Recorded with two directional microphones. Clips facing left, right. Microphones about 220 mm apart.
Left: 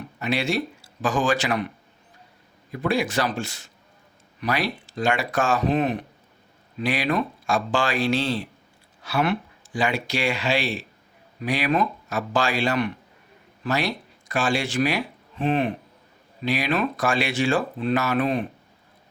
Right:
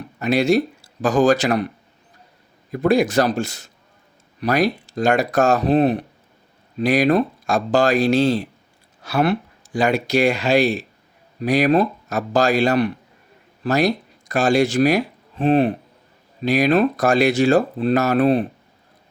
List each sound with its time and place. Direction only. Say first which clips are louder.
0.2 s speech: right 8 dB; 40° right (ahead or behind)
2.7 s speech: right 7 dB; 40° right (ahead or behind)